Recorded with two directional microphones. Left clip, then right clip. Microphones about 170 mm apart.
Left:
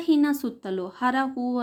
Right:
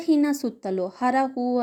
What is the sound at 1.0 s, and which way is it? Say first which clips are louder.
Speech: right 2 dB; 20° right (ahead or behind).